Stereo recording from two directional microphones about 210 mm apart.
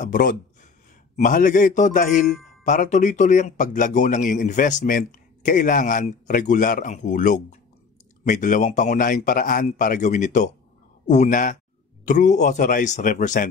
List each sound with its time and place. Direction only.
0.0 s a man's voice: 40° left (ahead or behind)